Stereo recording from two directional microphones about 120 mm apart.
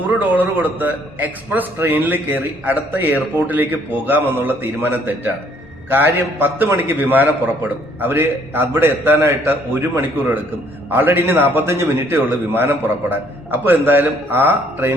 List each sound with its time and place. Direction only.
0.1 s a man's voice: 15° right (ahead or behind)
10.8 s a man's voice: 15° right (ahead or behind)